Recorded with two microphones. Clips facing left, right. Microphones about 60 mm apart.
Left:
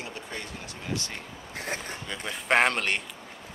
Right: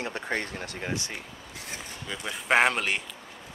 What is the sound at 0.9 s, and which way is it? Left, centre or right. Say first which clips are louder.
Speech: left 1 dB; right.